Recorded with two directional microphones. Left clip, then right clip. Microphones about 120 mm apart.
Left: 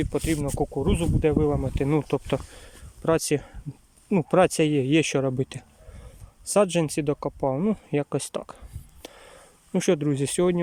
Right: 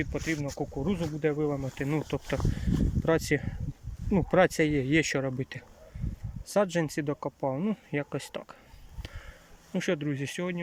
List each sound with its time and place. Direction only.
0.0 s speech: 30° left (ahead or behind)
0.3 s speech: 60° left (ahead or behind)
0.6 s speech: 25° left (ahead or behind)
3.0 s speech: 10° left (ahead or behind)
9.7 s speech: 25° left (ahead or behind); by 10.6 s 40° left (ahead or behind)